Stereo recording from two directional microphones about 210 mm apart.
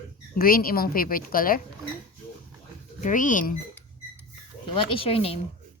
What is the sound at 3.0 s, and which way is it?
Speech, 40° left (ahead or behind).